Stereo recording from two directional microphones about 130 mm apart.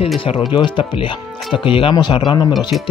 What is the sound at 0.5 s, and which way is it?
Speech, 40° left (ahead or behind).